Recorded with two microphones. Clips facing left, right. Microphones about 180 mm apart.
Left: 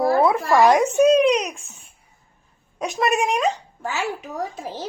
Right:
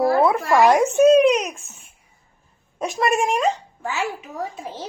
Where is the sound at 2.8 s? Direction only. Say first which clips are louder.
Right 1 dB; centre (ahead or behind).